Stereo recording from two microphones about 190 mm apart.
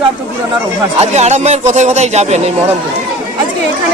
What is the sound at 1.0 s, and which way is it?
Speech, 35° right (ahead or behind).